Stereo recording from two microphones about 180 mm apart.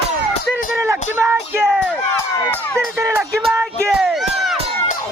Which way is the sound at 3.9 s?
Centre (ahead or behind).